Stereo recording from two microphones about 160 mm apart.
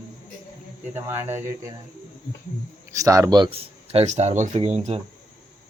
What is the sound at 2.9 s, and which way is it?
Speech, 20° right (ahead or behind).